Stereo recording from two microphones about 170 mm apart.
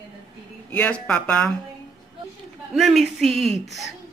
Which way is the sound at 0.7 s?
10° left (ahead or behind).